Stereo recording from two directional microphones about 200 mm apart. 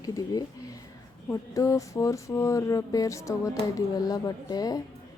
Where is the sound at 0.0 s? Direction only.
20° left (ahead or behind).